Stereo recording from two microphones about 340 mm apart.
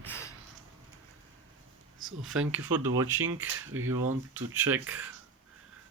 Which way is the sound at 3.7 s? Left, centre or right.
Right.